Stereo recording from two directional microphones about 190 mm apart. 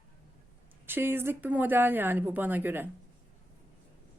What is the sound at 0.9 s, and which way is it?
A woman's voice, 10° right (ahead or behind).